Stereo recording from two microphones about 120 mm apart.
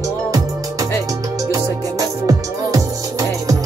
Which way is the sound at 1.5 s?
30° right (ahead or behind).